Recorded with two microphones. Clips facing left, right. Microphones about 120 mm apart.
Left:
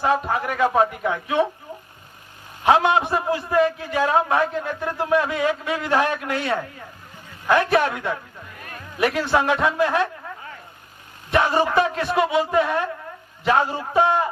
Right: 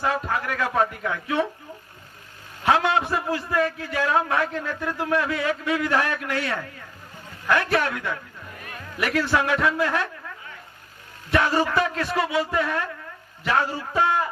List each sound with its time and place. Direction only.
0.0 s a man's voice: 20° left (ahead or behind)
2.6 s a man's voice: 20° left (ahead or behind)
11.3 s a man's voice: 20° left (ahead or behind)